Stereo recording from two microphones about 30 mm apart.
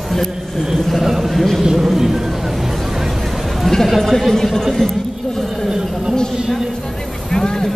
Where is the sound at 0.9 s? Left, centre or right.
Centre.